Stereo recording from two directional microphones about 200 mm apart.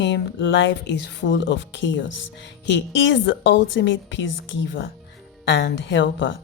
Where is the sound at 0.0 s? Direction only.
65° left (ahead or behind).